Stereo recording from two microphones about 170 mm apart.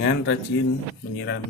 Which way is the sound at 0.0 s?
90° left.